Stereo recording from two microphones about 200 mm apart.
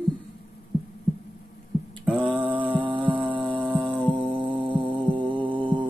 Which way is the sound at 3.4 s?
5° right (ahead or behind).